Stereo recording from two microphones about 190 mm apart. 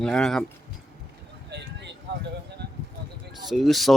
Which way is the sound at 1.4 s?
65° right (ahead or behind).